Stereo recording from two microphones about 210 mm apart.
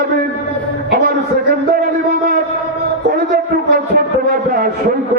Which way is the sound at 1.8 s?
45° right (ahead or behind).